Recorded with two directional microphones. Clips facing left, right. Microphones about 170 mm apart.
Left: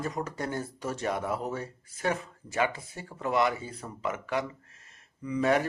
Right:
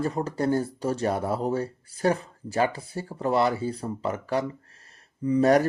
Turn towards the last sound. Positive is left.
turn(degrees=-40)  # may be behind; listen again after turning